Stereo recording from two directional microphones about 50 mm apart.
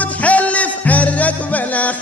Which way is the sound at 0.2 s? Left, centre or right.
Left.